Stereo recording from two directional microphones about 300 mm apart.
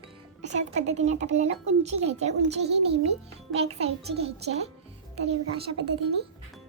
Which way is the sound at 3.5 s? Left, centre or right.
Centre.